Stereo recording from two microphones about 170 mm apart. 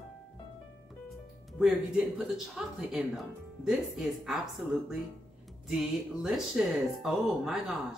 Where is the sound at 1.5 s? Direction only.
Centre (ahead or behind).